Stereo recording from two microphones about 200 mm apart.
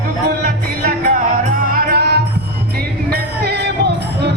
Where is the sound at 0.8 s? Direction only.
45° right (ahead or behind).